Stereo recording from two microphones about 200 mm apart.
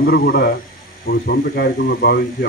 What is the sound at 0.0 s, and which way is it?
Speech, 50° left (ahead or behind).